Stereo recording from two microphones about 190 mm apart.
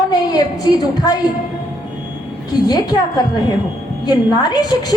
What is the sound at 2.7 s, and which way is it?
A woman's voice, 20° left (ahead or behind).